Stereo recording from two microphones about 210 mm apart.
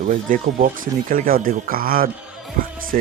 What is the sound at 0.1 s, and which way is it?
Speech, 40° right (ahead or behind).